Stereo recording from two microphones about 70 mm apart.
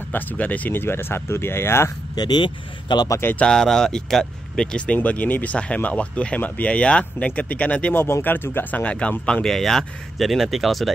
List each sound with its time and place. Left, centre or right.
0.1 s speech: left
2.1 s speech: left
3.4 s speech: centre
7.9 s speech: left; by 10.9 s centre